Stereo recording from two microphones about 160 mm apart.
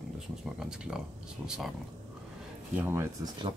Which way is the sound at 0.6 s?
5° right (ahead or behind).